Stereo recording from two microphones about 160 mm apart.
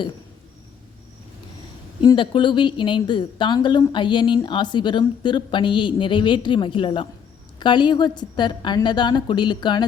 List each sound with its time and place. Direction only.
2.0 s a woman's voice: 30° left (ahead or behind)